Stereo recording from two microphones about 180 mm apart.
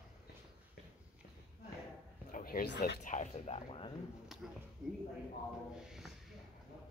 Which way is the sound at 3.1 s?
40° left (ahead or behind).